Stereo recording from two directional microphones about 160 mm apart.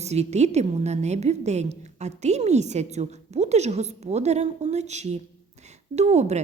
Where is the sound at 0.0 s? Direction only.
45° right (ahead or behind).